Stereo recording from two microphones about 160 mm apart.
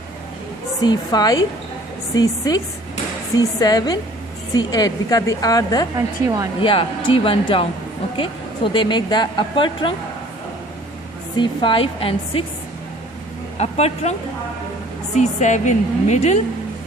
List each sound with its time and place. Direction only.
0.8 s speech: 25° left (ahead or behind)
6.2 s speech: 20° right (ahead or behind)
6.6 s a woman's voice: 35° left (ahead or behind)
11.3 s a woman's voice: 30° left (ahead or behind)
13.6 s a woman's voice: 40° left (ahead or behind)